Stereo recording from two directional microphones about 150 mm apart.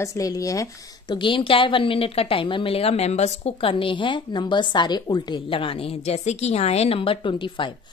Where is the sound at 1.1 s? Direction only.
35° left (ahead or behind).